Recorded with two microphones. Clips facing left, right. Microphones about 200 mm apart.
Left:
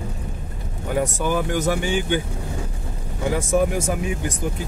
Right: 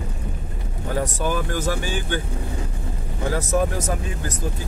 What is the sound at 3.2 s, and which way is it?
Speech, 10° left (ahead or behind).